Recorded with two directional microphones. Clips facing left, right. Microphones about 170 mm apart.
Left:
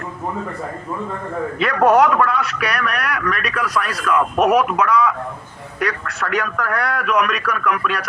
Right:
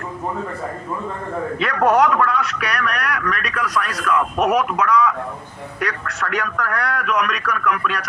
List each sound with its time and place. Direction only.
1.5 s a man's voice: 5° left (ahead or behind)